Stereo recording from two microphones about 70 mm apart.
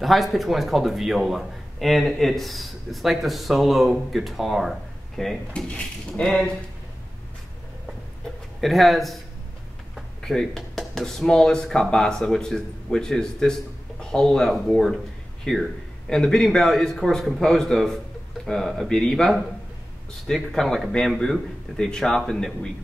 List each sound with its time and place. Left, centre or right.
0.0 s a man's voice: centre
5.7 s a man's voice: centre
8.5 s a man's voice: centre